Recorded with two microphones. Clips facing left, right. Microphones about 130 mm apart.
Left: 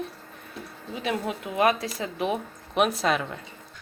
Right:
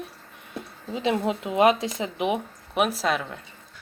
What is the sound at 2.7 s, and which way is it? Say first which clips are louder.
Speech: left 1 dB; centre (ahead or behind).